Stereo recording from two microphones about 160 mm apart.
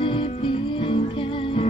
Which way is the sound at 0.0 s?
30° left (ahead or behind).